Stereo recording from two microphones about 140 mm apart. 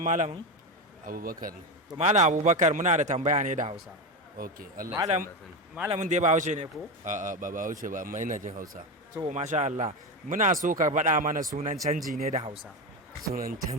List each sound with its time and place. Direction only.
0.0 s a man's voice: 60° right (ahead or behind)
1.0 s a man's voice: 90° right
2.0 s a man's voice: 55° right (ahead or behind)
4.4 s speech: 90° right
5.0 s a man's voice: 55° right (ahead or behind); by 8.8 s 85° right
9.3 s a man's voice: 55° right (ahead or behind)
12.3 s speech: 50° right (ahead or behind)
13.2 s speech: 90° right